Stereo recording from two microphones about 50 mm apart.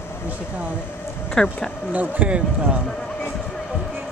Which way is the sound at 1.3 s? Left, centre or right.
Centre.